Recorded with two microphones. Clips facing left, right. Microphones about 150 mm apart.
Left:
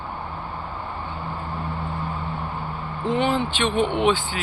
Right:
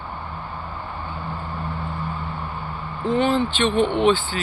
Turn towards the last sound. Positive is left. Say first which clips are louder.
# right 2 dB
turn(degrees=10)  # may be behind; listen again after turning